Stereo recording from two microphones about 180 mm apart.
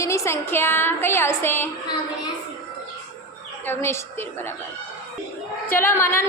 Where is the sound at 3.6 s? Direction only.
10° left (ahead or behind).